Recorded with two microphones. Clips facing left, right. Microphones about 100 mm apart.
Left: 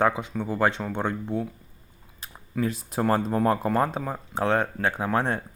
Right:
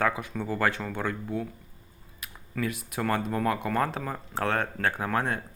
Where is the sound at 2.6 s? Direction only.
30° left (ahead or behind).